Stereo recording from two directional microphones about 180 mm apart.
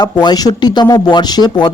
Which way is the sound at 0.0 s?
25° left (ahead or behind).